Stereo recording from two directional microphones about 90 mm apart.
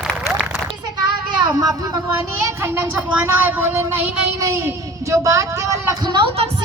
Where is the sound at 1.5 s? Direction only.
40° right (ahead or behind).